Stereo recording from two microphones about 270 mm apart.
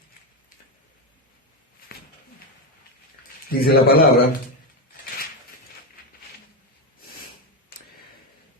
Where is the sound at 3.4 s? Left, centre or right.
Left.